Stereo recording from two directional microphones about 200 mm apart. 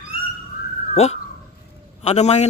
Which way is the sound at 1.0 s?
30° left (ahead or behind).